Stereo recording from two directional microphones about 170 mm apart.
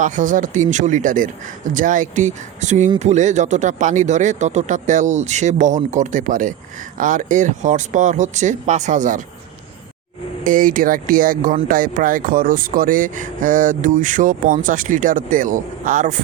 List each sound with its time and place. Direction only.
0.0 s speech: 50° right (ahead or behind)
10.4 s speech: 55° right (ahead or behind)